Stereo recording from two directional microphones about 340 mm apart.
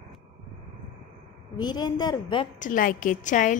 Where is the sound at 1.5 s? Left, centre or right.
Centre.